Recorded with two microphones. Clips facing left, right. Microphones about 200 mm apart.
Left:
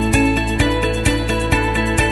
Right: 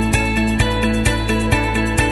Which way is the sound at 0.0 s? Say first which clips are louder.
Left 2 dB; centre (ahead or behind).